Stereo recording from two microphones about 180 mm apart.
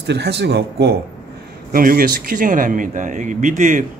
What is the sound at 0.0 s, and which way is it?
Speech, 70° right (ahead or behind).